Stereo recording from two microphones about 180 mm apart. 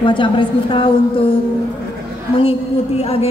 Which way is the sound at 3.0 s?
35° left (ahead or behind).